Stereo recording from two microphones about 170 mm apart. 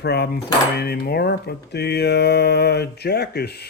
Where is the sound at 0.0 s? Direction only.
75° left (ahead or behind).